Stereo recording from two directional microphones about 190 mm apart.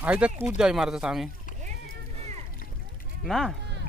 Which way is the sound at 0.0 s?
10° right (ahead or behind).